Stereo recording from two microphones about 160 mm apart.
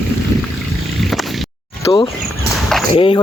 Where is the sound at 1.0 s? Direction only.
Centre (ahead or behind).